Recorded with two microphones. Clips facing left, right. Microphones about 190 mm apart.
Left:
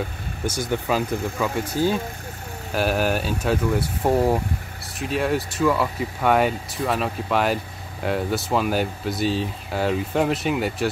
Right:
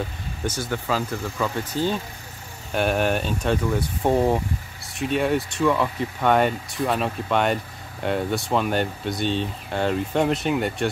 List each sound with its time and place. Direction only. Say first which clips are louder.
0.5 s speech: left 2 dB; 15° left (ahead or behind)